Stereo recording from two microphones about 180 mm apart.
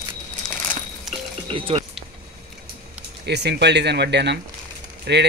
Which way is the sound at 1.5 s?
30° right (ahead or behind).